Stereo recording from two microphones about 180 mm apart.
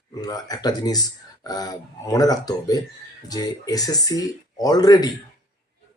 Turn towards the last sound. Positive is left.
turn(degrees=20)  # may be behind; listen again after turning